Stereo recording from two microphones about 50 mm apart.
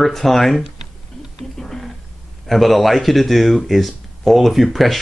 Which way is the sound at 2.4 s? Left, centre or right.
Centre.